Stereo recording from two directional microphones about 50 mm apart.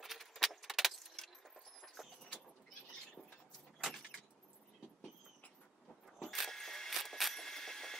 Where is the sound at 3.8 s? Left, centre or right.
Centre.